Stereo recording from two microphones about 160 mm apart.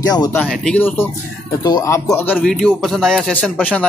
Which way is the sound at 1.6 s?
20° left (ahead or behind).